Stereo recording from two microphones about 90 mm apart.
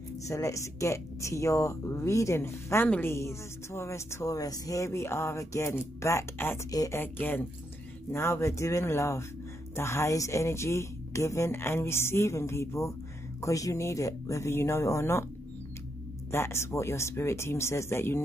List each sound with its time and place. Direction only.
0.3 s speech: 35° left (ahead or behind)
16.3 s speech: 30° left (ahead or behind)